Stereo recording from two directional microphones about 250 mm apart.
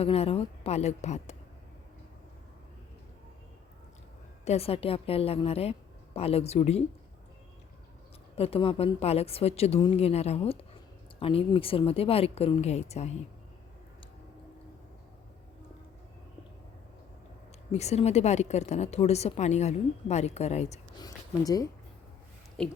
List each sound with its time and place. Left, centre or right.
0.0 s a woman's voice: left
4.4 s a woman's voice: left
8.4 s a woman's voice: left
17.7 s a woman's voice: left
21.0 s speech: centre